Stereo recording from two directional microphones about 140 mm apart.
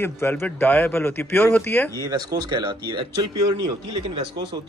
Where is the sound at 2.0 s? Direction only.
25° right (ahead or behind).